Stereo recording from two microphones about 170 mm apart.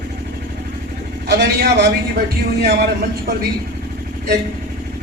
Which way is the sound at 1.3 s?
80° right.